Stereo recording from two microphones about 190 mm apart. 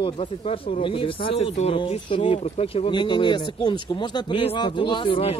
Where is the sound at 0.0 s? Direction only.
30° left (ahead or behind).